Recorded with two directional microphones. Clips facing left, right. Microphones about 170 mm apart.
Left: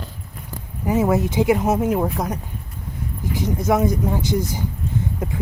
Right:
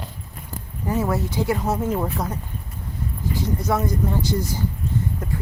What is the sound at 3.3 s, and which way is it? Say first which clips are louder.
Speech: left 4 dB; 15° left (ahead or behind).